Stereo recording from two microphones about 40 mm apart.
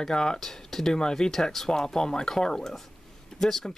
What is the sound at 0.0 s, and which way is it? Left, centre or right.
Speech, centre.